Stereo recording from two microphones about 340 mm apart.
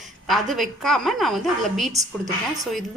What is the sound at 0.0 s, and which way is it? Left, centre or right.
A woman's voice, centre.